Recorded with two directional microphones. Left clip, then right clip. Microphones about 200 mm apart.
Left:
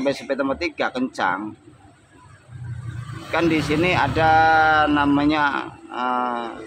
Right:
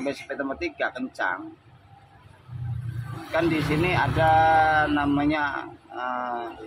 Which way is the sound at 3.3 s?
55° left (ahead or behind).